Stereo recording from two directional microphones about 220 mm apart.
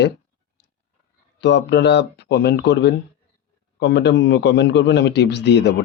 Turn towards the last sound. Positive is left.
turn(degrees=50)  # may be behind; listen again after turning